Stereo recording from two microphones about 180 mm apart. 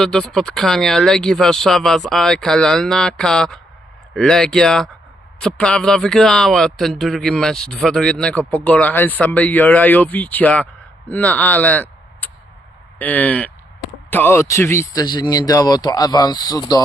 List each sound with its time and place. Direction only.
0.0 s a man's voice: 5° left (ahead or behind); by 16.8 s 20° left (ahead or behind)